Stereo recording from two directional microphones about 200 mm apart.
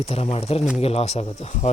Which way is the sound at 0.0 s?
30° left (ahead or behind).